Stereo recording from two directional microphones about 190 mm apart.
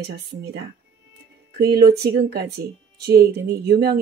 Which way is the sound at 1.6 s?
55° right (ahead or behind).